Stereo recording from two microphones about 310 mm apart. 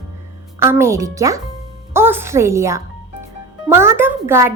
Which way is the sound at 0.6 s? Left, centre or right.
Centre.